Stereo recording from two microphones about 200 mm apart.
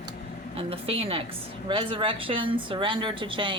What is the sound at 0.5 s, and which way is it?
A woman's voice, 30° right (ahead or behind).